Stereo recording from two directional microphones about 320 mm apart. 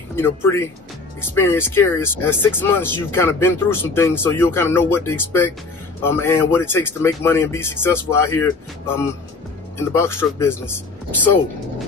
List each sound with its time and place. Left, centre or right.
0.1 s speech: centre